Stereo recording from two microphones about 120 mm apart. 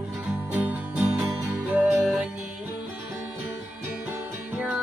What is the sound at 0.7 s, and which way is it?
Music, 10° right (ahead or behind).